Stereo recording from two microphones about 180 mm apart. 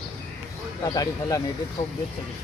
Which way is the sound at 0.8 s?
20° left (ahead or behind).